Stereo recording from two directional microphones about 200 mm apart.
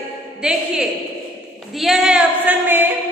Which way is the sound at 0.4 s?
5° right (ahead or behind).